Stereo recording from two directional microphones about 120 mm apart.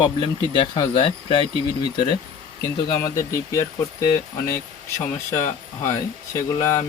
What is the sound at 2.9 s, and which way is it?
Speech, 30° left (ahead or behind).